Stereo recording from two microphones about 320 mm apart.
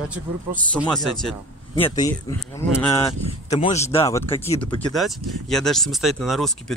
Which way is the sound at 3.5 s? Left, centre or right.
Left.